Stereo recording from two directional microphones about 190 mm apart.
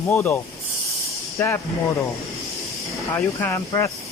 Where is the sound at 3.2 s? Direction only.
10° left (ahead or behind).